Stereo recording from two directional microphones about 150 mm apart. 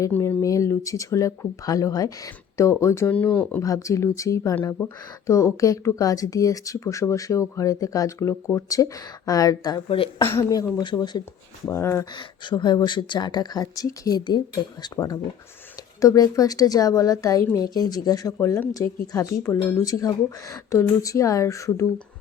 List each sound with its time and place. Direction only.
0.0 s speech: 15° left (ahead or behind)
3.6 s speech: 20° left (ahead or behind)
10.2 s speech: 20° left (ahead or behind)
12.1 s speech: 30° left (ahead or behind)